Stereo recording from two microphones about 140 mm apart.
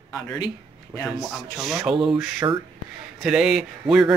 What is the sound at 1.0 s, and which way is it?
A man's voice, centre (ahead or behind).